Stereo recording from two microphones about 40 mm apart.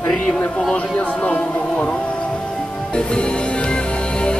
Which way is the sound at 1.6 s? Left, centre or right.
Centre.